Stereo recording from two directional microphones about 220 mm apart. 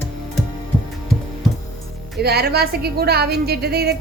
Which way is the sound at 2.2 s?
45° right (ahead or behind).